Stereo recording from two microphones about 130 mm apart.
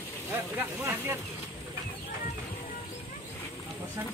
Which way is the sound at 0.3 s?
15° right (ahead or behind).